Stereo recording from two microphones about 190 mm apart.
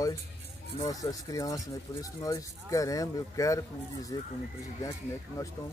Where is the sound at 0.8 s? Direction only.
20° left (ahead or behind).